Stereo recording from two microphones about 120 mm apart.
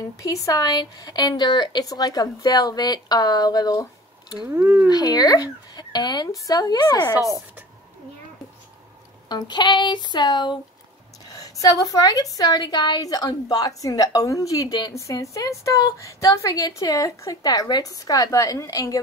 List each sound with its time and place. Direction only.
0.2 s a woman's voice: 30° left (ahead or behind)
4.5 s speech: 15° right (ahead or behind)
4.8 s a woman's voice: 35° left (ahead or behind)
9.3 s a woman's voice: 35° left (ahead or behind)